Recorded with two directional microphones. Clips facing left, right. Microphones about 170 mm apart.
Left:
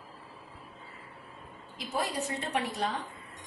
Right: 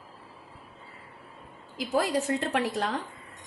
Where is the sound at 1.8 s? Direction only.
90° right.